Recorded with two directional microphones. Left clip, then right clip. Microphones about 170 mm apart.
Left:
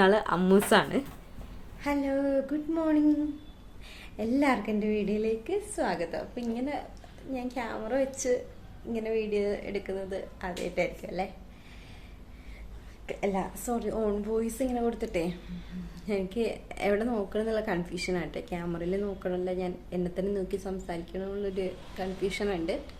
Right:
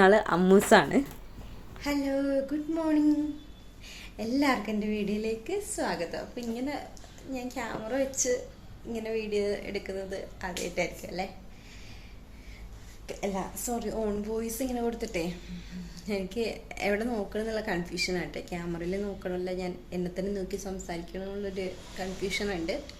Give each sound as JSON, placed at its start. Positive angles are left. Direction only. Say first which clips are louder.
{"t": 0.0, "sound": "a woman's voice", "louder": "right 2 dB", "side_deg": -15}
{"t": 1.8, "sound": "a woman's voice", "louder": "left 1 dB", "side_deg": 0}
{"t": 13.1, "sound": "a woman's voice", "louder": "left 3 dB", "side_deg": 5}